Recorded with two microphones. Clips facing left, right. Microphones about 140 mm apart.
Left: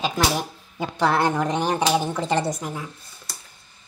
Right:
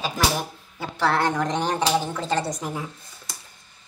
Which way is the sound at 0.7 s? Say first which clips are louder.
Left 2 dB; 15° left (ahead or behind).